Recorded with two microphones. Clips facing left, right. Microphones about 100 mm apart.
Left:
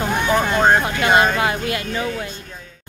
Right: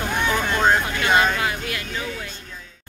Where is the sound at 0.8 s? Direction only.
30° left (ahead or behind).